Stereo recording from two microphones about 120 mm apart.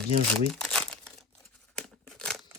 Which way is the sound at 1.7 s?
5° left (ahead or behind).